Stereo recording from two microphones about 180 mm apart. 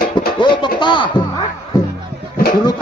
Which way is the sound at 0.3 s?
25° left (ahead or behind).